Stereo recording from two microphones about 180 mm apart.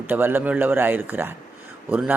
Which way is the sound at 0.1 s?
10° right (ahead or behind).